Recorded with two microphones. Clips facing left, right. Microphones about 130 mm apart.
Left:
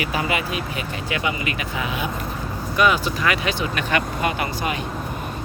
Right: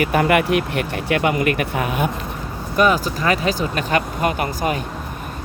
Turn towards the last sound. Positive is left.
turn(degrees=-45)  # may be behind; listen again after turning